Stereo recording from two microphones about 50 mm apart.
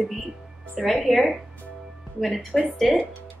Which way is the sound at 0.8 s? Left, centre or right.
Centre.